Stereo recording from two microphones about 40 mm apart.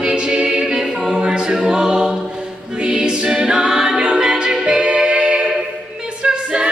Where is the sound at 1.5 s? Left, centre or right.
Centre.